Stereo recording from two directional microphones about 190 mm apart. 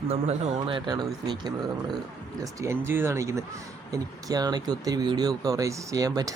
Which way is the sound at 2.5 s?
15° right (ahead or behind).